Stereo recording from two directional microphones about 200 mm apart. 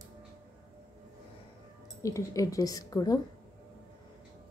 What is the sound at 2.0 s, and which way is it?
A woman's voice, 15° left (ahead or behind).